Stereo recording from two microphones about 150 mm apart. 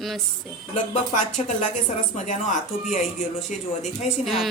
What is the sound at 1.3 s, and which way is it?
Speech, 50° left (ahead or behind).